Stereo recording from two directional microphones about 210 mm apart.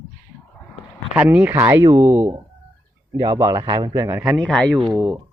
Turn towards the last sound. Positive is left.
turn(degrees=-5)  # may be behind; listen again after turning